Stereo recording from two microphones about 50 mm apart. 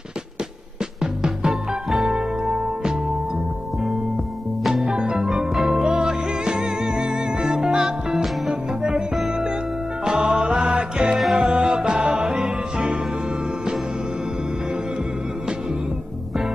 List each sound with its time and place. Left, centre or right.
1.0 s music: centre
4.6 s music: centre
4.9 s music: centre